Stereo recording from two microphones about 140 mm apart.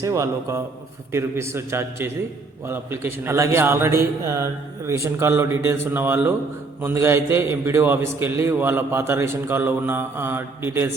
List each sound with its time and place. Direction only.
0.0 s a man's voice: 25° right (ahead or behind)